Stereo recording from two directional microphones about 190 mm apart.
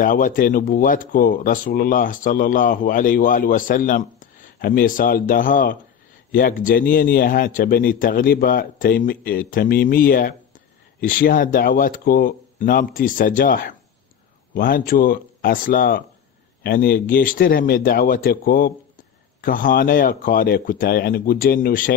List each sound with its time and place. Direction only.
0.0 s speech: 45° left (ahead or behind)